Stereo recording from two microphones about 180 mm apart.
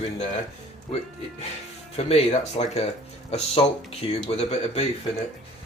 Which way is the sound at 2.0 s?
35° left (ahead or behind).